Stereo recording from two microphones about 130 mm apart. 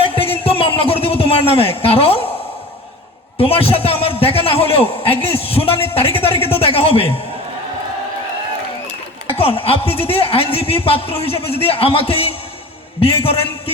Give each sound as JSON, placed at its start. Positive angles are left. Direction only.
{"t": 0.0, "sound": "a sound", "side_deg": 45}
{"t": 3.3, "sound": "a man's voice", "side_deg": 45}
{"t": 9.4, "sound": "a man's voice", "side_deg": 45}